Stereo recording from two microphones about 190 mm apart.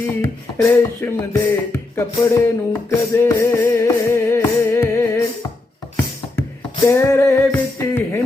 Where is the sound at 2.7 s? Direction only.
15° left (ahead or behind).